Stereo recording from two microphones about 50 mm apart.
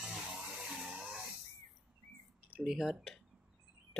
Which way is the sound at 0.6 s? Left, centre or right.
Centre.